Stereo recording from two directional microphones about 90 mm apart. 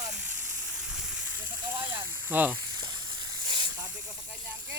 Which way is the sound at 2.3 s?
20° right (ahead or behind).